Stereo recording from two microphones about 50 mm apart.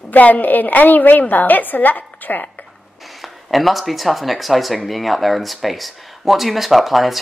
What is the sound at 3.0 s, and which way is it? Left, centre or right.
Speech, centre.